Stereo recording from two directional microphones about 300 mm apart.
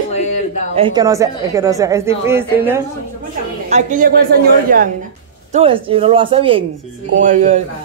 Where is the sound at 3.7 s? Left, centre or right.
Right.